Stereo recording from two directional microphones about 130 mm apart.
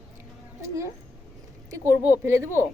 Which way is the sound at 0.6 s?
25° right (ahead or behind).